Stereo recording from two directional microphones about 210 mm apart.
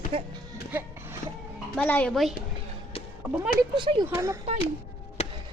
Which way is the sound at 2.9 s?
25° left (ahead or behind).